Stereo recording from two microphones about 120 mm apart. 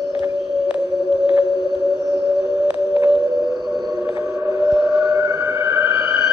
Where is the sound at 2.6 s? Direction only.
20° right (ahead or behind).